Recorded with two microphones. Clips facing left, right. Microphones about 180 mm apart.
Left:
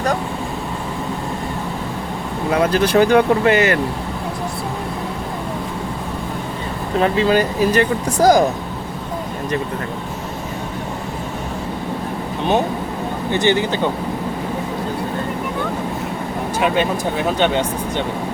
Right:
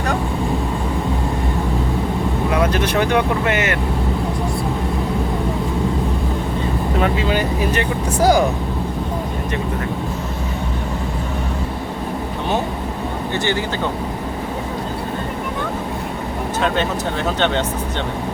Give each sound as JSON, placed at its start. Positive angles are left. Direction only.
{"t": 2.7, "sound": "speech", "side_deg": 35}
{"t": 7.0, "sound": "speech", "side_deg": 40}
{"t": 13.3, "sound": "speech", "side_deg": 20}
{"t": 16.6, "sound": "speech", "side_deg": 10}